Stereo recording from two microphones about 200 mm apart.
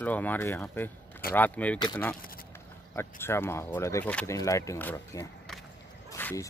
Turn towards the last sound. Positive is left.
turn(degrees=15)  # may be behind; listen again after turning